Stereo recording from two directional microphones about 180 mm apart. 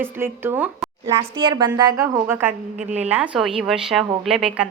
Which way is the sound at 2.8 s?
40° right (ahead or behind).